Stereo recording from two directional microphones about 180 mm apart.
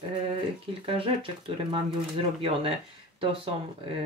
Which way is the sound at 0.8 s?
30° right (ahead or behind).